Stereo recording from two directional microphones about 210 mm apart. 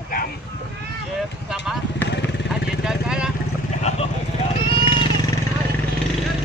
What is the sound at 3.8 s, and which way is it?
Vehicle, 30° left (ahead or behind).